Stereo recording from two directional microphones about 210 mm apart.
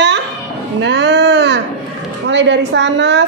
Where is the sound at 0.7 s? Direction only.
60° right (ahead or behind).